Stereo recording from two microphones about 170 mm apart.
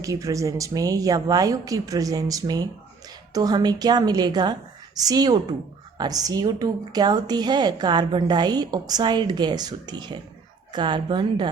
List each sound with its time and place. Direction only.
0.0 s a woman's voice: 20° right (ahead or behind)